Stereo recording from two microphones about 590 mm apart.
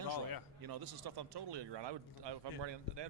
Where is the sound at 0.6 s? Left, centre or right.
Right.